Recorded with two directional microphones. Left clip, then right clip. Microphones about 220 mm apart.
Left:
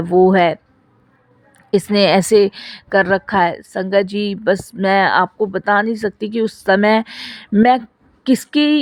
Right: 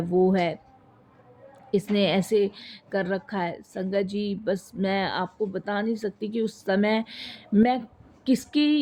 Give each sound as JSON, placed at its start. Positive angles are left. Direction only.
{"t": 0.0, "sound": "a man's voice", "side_deg": 40}
{"t": 1.7, "sound": "a man's voice", "side_deg": 45}